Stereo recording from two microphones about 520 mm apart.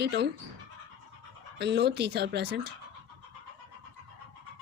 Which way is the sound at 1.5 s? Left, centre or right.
Centre.